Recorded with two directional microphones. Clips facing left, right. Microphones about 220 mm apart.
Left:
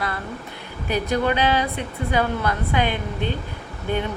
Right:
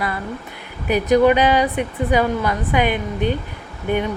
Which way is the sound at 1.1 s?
15° right (ahead or behind).